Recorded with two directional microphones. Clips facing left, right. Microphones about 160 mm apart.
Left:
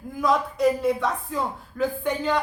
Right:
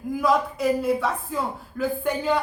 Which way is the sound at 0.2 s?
5° right (ahead or behind).